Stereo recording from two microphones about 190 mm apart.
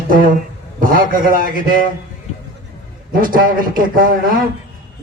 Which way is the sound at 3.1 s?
50° right (ahead or behind).